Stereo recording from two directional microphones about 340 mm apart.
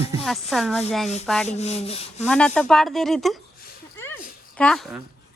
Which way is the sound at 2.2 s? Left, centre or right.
Centre.